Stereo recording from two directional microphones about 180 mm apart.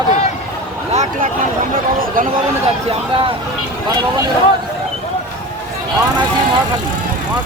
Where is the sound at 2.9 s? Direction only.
30° right (ahead or behind).